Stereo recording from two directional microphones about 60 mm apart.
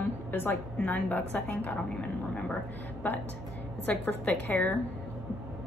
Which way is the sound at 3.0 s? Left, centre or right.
Left.